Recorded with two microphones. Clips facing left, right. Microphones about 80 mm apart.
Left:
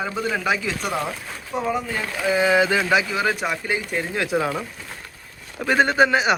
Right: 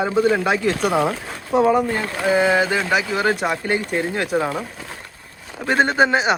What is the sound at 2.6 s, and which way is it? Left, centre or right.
Speech, centre.